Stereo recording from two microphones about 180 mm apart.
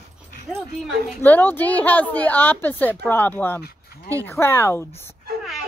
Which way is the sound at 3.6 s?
60° left (ahead or behind).